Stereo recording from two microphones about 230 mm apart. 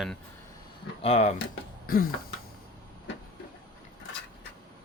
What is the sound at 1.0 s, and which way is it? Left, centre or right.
Speech, left.